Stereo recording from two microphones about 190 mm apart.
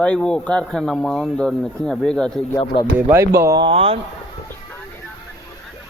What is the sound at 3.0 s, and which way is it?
Speech, 10° right (ahead or behind).